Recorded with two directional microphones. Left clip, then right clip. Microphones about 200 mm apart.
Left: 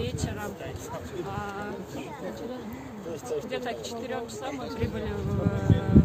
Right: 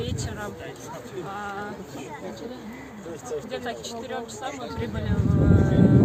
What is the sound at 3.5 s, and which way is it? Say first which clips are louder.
Speech: right 1 dB; centre (ahead or behind).